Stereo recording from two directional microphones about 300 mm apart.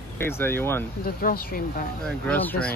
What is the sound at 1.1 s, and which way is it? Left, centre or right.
Speech, left.